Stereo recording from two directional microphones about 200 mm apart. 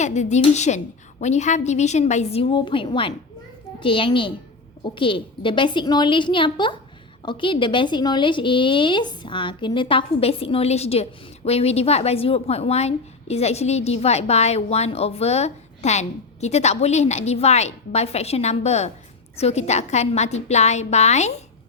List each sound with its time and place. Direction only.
0.0 s a woman's voice: 35° left (ahead or behind)